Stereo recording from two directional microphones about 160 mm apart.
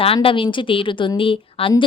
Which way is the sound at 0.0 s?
35° left (ahead or behind).